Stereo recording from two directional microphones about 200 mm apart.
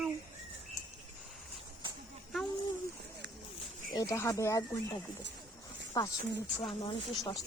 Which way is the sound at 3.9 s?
15° left (ahead or behind).